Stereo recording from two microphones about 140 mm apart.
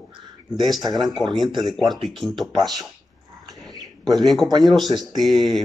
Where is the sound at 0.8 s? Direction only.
30° right (ahead or behind).